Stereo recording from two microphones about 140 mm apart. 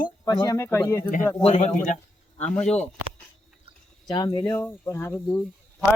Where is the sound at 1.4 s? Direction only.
45° left (ahead or behind).